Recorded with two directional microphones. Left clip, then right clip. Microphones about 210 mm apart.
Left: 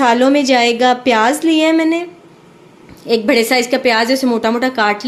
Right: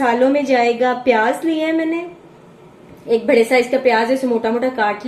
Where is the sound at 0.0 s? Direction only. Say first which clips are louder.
Left 3 dB; 45° left (ahead or behind).